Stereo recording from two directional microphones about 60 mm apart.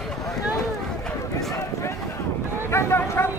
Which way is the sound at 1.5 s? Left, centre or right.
Left.